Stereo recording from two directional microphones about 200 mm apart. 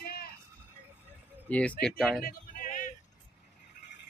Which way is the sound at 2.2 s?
40° left (ahead or behind).